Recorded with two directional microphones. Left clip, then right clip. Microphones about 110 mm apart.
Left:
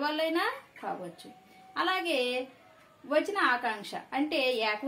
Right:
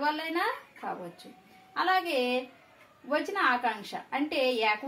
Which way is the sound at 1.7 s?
60° left (ahead or behind).